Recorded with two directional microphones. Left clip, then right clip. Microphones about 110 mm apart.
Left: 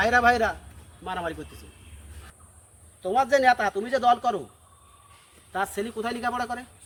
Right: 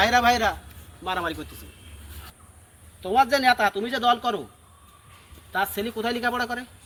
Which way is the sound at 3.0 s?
10° left (ahead or behind).